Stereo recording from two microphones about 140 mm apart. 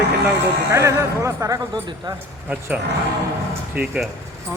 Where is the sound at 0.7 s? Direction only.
20° right (ahead or behind).